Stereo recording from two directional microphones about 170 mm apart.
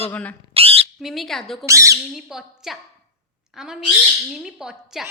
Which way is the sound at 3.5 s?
5° right (ahead or behind).